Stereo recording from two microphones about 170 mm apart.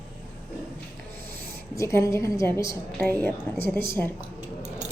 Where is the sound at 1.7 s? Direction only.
15° left (ahead or behind).